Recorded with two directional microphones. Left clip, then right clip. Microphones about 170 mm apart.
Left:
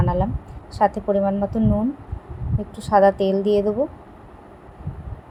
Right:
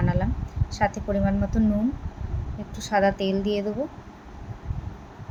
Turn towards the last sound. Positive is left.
turn(degrees=10)  # may be behind; listen again after turning